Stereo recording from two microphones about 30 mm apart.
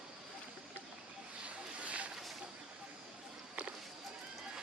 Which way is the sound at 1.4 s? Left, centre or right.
Right.